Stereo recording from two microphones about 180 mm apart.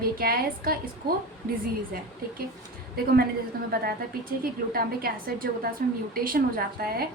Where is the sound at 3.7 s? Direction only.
55° right (ahead or behind).